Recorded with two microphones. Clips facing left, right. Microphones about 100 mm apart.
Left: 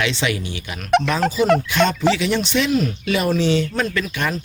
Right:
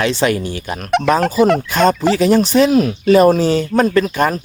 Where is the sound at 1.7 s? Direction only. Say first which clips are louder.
Right 4 dB; 40° right (ahead or behind).